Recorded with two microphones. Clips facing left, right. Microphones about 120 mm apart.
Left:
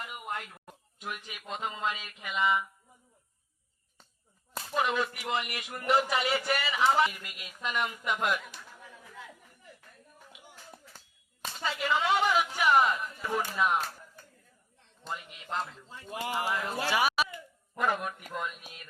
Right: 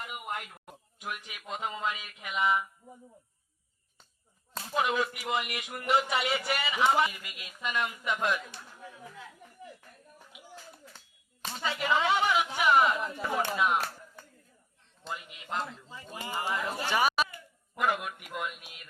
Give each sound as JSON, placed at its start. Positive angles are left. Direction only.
{"t": 0.0, "sound": "a sound", "side_deg": -10}
{"t": 1.4, "sound": "a man's voice", "side_deg": -5}
{"t": 4.7, "sound": "a man's voice", "side_deg": -5}
{"t": 12.2, "sound": "a sound", "side_deg": 0}
{"t": 13.0, "sound": "speech", "side_deg": -80}
{"t": 13.6, "sound": "a man's voice", "side_deg": -5}
{"t": 15.0, "sound": "a man's voice", "side_deg": 0}
{"t": 16.2, "sound": "a man's voice", "side_deg": 90}
{"t": 16.9, "sound": "a man's voice", "side_deg": 5}